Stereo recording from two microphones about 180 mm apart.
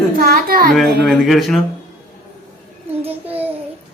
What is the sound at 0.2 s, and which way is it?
Speech, 55° right (ahead or behind).